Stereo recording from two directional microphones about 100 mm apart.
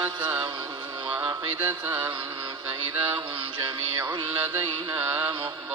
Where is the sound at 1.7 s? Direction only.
15° right (ahead or behind).